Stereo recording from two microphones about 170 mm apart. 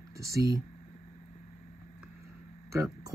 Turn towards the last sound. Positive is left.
turn(degrees=-15)  # may be behind; listen again after turning